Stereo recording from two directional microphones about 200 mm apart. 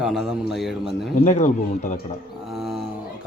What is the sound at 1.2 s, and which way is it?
Speech, 35° left (ahead or behind).